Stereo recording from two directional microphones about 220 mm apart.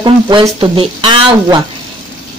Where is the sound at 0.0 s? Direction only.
20° right (ahead or behind).